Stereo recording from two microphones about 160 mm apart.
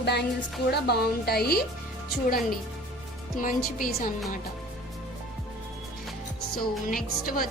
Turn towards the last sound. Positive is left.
turn(degrees=60)  # may be behind; listen again after turning